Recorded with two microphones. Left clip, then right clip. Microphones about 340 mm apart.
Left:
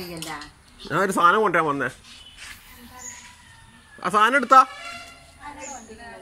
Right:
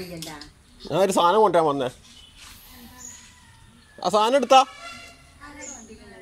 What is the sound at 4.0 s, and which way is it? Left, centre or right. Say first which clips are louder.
Speech: left 1 dB; right.